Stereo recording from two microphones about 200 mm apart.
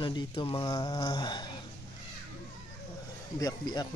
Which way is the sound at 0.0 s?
20° left (ahead or behind).